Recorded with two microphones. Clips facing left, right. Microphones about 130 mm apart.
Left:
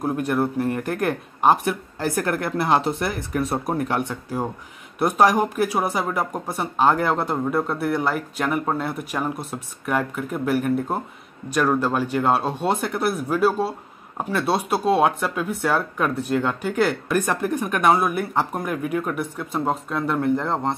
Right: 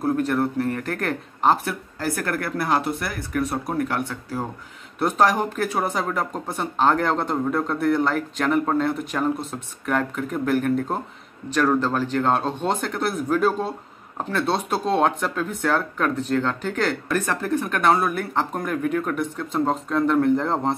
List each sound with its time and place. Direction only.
0.0 s speech: 15° left (ahead or behind)